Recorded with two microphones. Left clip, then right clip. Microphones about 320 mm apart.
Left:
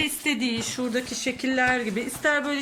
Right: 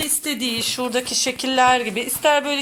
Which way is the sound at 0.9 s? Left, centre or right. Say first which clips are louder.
Right 6 dB; right.